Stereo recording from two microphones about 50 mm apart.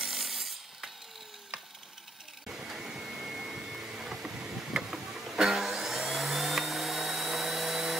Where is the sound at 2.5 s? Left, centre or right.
Centre.